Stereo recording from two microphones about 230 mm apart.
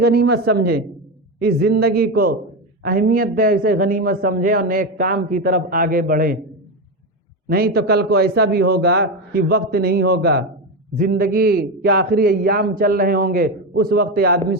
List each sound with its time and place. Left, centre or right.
0.0 s a man's voice: right
7.4 s a man's voice: right